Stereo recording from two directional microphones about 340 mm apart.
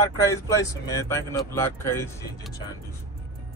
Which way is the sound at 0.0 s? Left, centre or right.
Centre.